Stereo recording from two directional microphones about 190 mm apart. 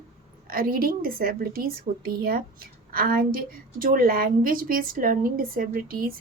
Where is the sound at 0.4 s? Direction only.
50° right (ahead or behind).